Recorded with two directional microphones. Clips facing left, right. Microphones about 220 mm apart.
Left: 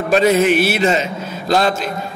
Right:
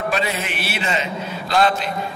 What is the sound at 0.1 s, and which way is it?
A man's voice, 45° left (ahead or behind).